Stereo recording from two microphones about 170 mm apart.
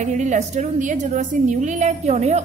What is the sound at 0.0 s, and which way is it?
A woman's voice, 45° right (ahead or behind).